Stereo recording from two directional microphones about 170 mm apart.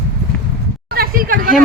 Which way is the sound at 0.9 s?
60° right (ahead or behind).